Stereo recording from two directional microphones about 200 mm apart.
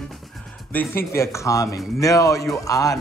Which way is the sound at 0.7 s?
10° left (ahead or behind).